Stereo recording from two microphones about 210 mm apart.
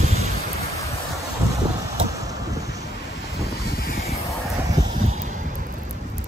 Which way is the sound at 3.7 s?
45° left (ahead or behind).